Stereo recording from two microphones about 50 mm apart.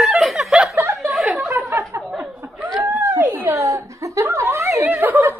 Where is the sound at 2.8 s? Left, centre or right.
Right.